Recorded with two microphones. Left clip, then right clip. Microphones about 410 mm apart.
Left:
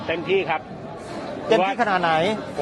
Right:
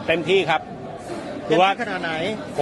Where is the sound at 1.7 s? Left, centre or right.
Left.